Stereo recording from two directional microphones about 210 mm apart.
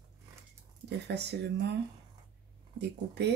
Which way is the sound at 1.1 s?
55° right (ahead or behind).